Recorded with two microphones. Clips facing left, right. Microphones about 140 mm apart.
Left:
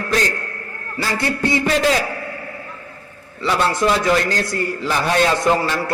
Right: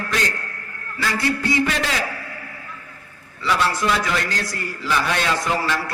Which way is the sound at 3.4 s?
25° left (ahead or behind).